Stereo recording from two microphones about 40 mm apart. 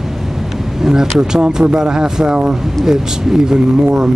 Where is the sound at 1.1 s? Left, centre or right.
Centre.